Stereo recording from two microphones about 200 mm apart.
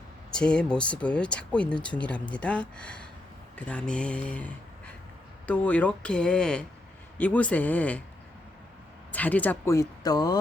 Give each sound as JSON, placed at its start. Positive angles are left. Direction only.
{"t": 0.3, "sound": "speech", "side_deg": 5}
{"t": 9.1, "sound": "speech", "side_deg": 10}